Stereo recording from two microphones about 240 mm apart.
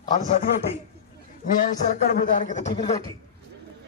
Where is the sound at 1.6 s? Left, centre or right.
Left.